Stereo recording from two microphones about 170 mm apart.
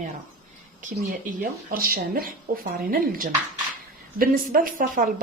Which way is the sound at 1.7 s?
60° right (ahead or behind).